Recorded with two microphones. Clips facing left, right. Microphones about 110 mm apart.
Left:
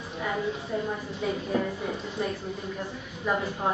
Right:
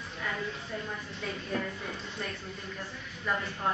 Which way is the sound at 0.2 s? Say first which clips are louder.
Left 6 dB; 20° left (ahead or behind).